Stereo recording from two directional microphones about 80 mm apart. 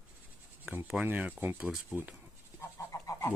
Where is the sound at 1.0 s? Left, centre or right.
Right.